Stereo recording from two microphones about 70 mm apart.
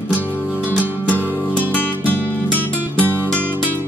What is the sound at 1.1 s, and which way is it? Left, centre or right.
Music, left.